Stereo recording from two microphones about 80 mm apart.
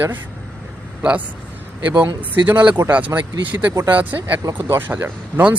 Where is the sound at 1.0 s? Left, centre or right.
Centre.